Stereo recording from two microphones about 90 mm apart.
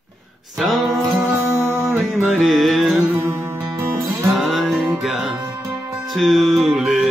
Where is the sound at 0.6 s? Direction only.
Centre (ahead or behind).